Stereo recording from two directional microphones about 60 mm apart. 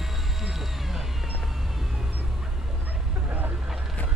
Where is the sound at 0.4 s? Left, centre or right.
Centre.